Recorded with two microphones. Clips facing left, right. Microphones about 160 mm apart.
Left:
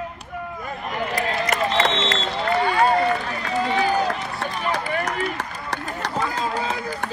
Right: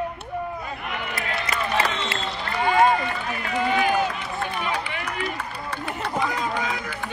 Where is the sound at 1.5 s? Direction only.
90° left.